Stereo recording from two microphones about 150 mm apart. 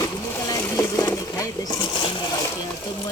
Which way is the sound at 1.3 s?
25° left (ahead or behind).